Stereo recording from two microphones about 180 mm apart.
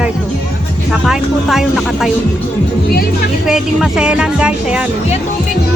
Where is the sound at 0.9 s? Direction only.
Centre (ahead or behind).